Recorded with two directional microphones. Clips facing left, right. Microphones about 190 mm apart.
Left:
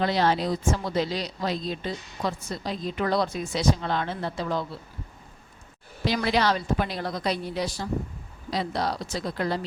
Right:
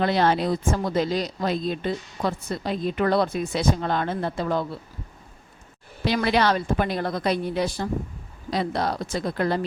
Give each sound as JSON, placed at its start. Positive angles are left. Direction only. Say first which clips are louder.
{"t": 0.0, "sound": "a woman's voice", "louder": "right 2 dB", "side_deg": -55}
{"t": 6.1, "sound": "a woman's voice", "louder": "right 3 dB", "side_deg": -60}